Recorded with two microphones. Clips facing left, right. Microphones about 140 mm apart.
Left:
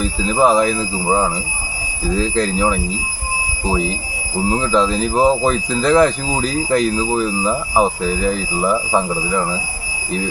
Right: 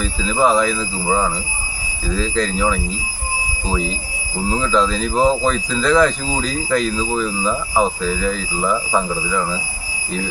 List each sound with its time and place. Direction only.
0.0 s speech: 15° left (ahead or behind)
4.4 s speech: 15° left (ahead or behind)